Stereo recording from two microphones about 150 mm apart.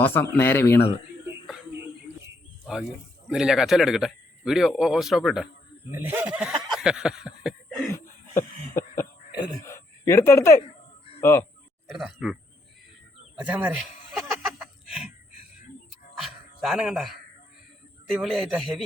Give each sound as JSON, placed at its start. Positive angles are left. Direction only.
{"t": 0.0, "sound": "speech", "side_deg": 15}
{"t": 3.2, "sound": "speech", "side_deg": -5}
{"t": 5.9, "sound": "speech", "side_deg": -10}
{"t": 8.4, "sound": "cough", "side_deg": 20}
{"t": 9.6, "sound": "a sound", "side_deg": 20}
{"t": 11.2, "sound": "speech", "side_deg": 15}
{"t": 11.9, "sound": "speech", "side_deg": 0}
{"t": 13.4, "sound": "speech", "side_deg": -10}
{"t": 14.1, "sound": "a sound", "side_deg": -5}
{"t": 16.2, "sound": "a man's voice", "side_deg": -5}